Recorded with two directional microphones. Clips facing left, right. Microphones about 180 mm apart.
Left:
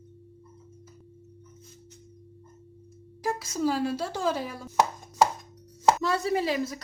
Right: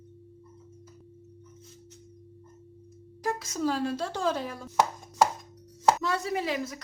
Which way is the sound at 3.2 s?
5° left (ahead or behind).